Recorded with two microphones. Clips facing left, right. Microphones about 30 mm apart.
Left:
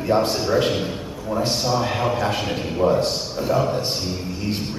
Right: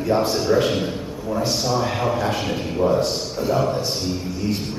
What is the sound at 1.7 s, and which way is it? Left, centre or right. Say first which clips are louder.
Speech: even; centre.